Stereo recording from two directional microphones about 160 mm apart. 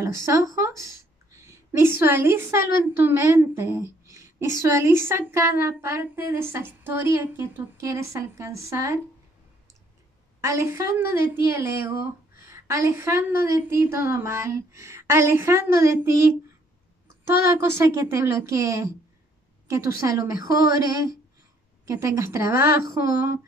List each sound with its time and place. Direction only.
0.0 s a woman's voice: 20° right (ahead or behind)
10.4 s a woman's voice: 20° right (ahead or behind)
17.5 s a woman's voice: 15° right (ahead or behind)